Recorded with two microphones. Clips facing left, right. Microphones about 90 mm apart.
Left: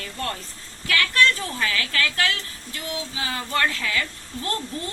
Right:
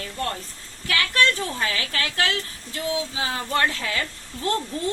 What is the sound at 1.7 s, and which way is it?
Speech, 25° right (ahead or behind).